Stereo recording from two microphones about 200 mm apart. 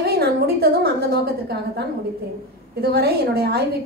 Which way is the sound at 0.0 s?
50° right (ahead or behind).